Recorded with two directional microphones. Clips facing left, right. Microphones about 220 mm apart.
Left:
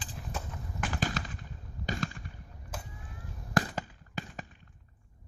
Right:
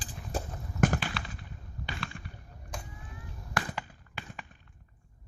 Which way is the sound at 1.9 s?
40° left (ahead or behind).